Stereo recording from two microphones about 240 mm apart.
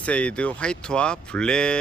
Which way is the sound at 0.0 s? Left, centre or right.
Centre.